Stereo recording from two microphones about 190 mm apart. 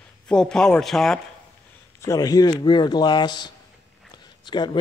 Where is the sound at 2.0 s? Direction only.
15° left (ahead or behind).